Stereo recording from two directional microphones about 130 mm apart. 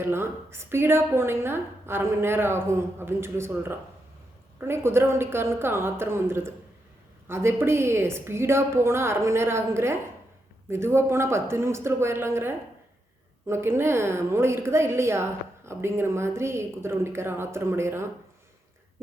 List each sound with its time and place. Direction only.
0.0 s a woman's voice: 20° right (ahead or behind)